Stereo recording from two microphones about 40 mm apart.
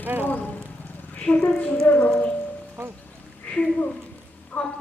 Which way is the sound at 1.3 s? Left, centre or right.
Left.